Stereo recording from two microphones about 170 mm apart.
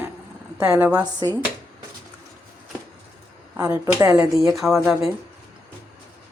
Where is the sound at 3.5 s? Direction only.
20° right (ahead or behind).